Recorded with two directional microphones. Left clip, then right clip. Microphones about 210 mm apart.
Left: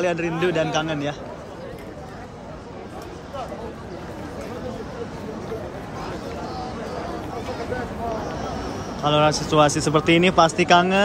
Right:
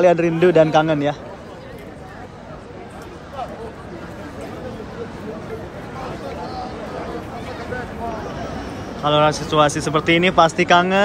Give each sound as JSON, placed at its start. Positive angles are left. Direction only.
{"t": 0.0, "sound": "a man's voice", "side_deg": 5}
{"t": 9.0, "sound": "speech", "side_deg": 15}